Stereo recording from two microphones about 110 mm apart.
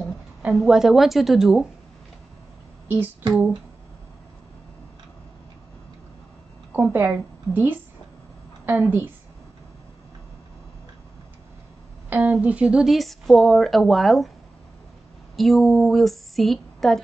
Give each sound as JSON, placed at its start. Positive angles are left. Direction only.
{"t": 0.6, "sound": "speech", "side_deg": -5}
{"t": 2.9, "sound": "a woman's voice", "side_deg": -15}
{"t": 6.7, "sound": "a woman's voice", "side_deg": -15}
{"t": 12.1, "sound": "speech", "side_deg": -15}
{"t": 15.3, "sound": "speech", "side_deg": 0}